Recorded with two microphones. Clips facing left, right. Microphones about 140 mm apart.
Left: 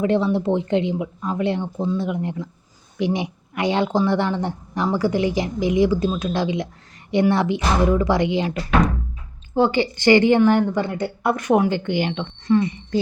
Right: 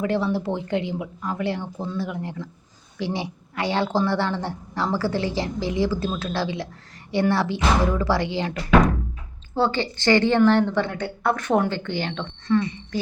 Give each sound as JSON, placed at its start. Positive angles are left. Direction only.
{"t": 0.0, "sound": "speech", "side_deg": 20}
{"t": 12.5, "sound": "speech", "side_deg": 20}